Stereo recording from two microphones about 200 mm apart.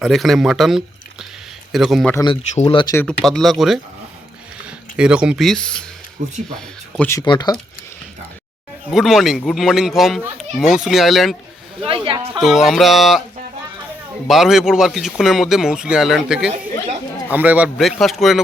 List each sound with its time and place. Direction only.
0.0 s a man's voice: centre (ahead or behind)
2.1 s speech: 25° left (ahead or behind)
2.9 s a man's voice: 5° left (ahead or behind)
7.2 s speech: 20° left (ahead or behind)
8.9 s a man's voice: centre (ahead or behind)
11.9 s speech: 25° right (ahead or behind)
12.3 s a man's voice: centre (ahead or behind)
14.3 s a man's voice: centre (ahead or behind)